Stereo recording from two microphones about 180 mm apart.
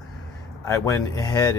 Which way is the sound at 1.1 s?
20° left (ahead or behind).